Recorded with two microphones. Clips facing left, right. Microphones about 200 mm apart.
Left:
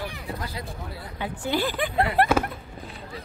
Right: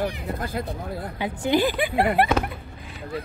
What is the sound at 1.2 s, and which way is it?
Speech, 15° right (ahead or behind).